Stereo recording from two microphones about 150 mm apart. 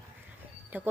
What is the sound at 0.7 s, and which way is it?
Speech, 10° right (ahead or behind).